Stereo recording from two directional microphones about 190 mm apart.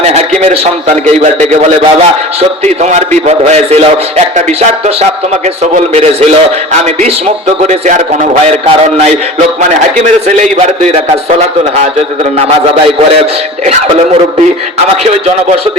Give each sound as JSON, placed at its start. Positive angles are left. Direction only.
{"t": 0.0, "sound": "a man's voice", "side_deg": -35}
{"t": 2.8, "sound": "a man's voice", "side_deg": -35}
{"t": 5.7, "sound": "a man's voice", "side_deg": -35}
{"t": 7.7, "sound": "a man's voice", "side_deg": -40}